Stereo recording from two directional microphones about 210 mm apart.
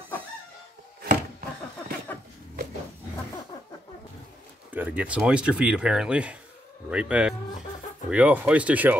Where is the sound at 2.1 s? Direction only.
10° left (ahead or behind).